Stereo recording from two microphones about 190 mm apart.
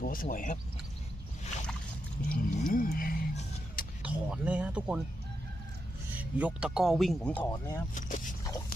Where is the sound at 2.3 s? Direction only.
45° left (ahead or behind).